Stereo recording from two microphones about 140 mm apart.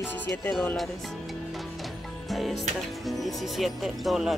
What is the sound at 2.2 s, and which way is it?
Music, centre (ahead or behind).